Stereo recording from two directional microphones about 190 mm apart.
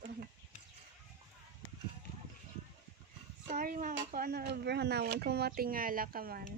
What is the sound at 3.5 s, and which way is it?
Speech, 45° right (ahead or behind).